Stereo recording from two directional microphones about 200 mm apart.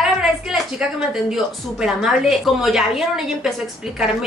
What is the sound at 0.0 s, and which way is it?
A woman's voice, centre (ahead or behind).